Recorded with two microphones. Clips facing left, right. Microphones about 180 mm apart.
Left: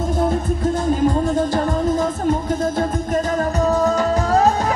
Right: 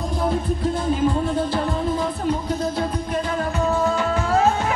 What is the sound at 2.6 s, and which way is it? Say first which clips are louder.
Music: left 4 dB; 45° left (ahead or behind).